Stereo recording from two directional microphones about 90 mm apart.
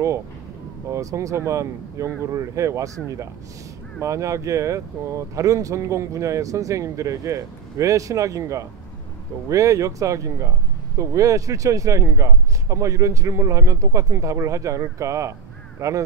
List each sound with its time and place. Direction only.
0.8 s speech: 35° right (ahead or behind)